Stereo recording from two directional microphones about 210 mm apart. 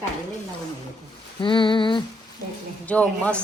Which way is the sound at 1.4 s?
25° left (ahead or behind).